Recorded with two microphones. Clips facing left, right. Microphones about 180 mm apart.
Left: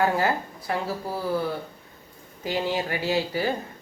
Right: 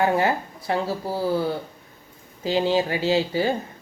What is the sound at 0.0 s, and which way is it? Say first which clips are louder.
Speech: right 2 dB; 20° right (ahead or behind).